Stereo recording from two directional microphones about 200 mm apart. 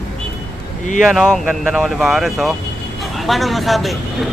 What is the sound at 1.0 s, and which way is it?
Speech, centre (ahead or behind).